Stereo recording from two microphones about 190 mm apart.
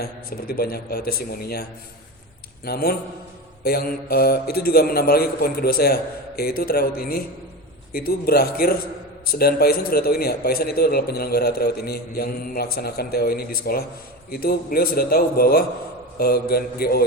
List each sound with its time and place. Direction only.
0.0 s a man's voice: 55° left (ahead or behind)
2.6 s a man's voice: 50° left (ahead or behind)